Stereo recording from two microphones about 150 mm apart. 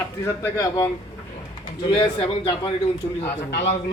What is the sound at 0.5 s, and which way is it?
Speech, 25° left (ahead or behind).